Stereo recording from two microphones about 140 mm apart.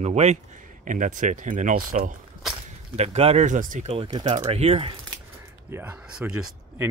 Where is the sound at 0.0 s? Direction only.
50° right (ahead or behind).